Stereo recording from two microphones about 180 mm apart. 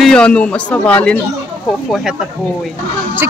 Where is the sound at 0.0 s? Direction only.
5° left (ahead or behind).